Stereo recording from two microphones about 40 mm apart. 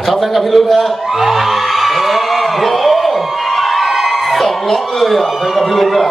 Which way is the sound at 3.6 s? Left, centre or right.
Centre.